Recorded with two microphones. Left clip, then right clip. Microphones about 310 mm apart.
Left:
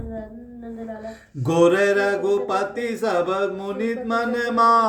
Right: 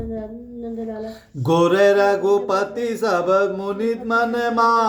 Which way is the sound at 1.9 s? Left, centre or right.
Centre.